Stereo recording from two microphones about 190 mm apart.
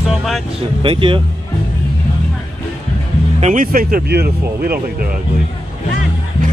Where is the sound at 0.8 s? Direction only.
25° right (ahead or behind).